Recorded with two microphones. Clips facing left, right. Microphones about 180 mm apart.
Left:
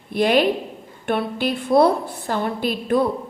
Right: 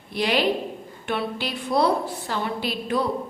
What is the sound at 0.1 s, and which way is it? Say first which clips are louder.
A woman's voice: left 5 dB; 50° left (ahead or behind).